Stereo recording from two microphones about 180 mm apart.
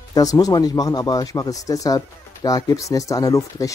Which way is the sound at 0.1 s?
20° left (ahead or behind).